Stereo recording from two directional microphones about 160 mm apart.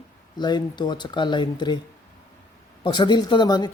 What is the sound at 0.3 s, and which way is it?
Speech, 30° left (ahead or behind).